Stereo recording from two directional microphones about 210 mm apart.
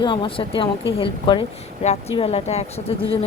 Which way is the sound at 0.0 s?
20° left (ahead or behind).